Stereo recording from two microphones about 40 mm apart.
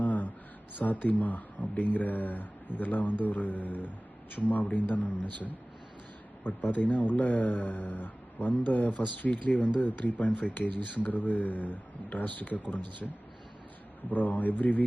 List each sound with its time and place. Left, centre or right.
0.0 s a sound: left
0.8 s a man's voice: left
6.4 s a man's voice: left
14.1 s a man's voice: left